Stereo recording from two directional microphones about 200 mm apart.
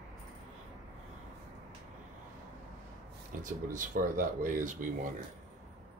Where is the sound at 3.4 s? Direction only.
40° right (ahead or behind).